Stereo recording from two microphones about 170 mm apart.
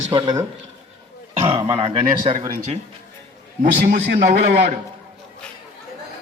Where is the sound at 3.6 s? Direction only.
60° right (ahead or behind).